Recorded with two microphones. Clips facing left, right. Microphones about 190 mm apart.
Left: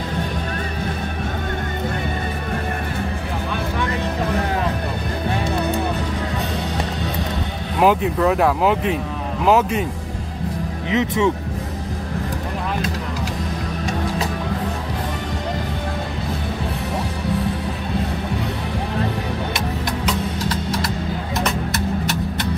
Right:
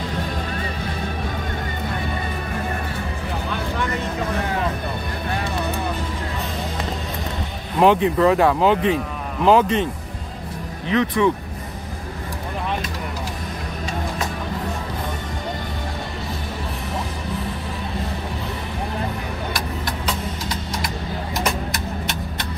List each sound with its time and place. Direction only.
7.8 s speech: 5° left (ahead or behind)
10.9 s speech: 20° left (ahead or behind)